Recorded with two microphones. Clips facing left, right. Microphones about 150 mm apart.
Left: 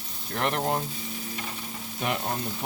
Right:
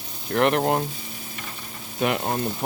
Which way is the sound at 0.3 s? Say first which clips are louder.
Right 7 dB; 75° right (ahead or behind).